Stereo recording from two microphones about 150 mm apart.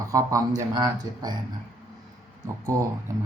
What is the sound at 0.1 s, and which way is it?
Speech, 20° right (ahead or behind).